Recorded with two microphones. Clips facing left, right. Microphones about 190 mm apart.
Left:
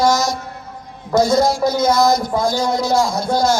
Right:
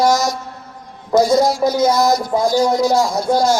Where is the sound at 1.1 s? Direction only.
35° right (ahead or behind).